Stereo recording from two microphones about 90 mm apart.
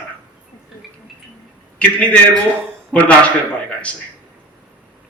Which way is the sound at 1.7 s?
15° left (ahead or behind).